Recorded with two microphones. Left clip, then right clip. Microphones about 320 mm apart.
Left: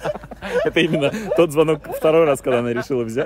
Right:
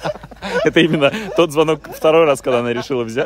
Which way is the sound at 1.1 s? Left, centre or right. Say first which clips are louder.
Right 1 dB; centre.